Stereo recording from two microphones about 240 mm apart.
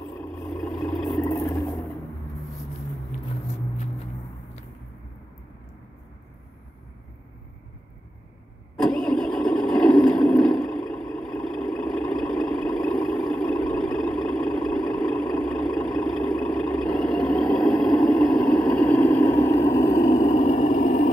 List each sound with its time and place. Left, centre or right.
0.1 s vehicle: centre
8.9 s vehicle: centre
20.0 s vehicle: left